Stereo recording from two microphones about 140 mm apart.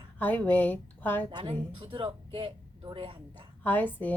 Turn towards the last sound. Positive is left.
turn(degrees=10)  # may be behind; listen again after turning